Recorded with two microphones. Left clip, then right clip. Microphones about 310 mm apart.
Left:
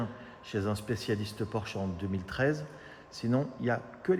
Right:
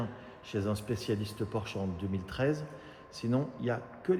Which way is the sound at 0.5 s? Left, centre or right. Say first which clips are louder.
Left 1 dB; left.